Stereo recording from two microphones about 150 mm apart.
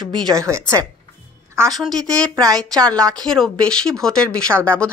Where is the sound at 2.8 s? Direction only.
5° left (ahead or behind).